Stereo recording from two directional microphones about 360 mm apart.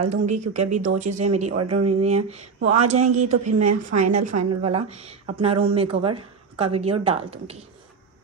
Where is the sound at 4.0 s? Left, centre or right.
Centre.